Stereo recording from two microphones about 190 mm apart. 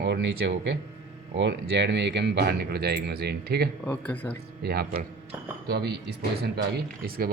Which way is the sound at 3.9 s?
10° left (ahead or behind).